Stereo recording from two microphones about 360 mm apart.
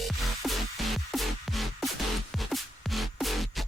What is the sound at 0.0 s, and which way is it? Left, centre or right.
Music, centre.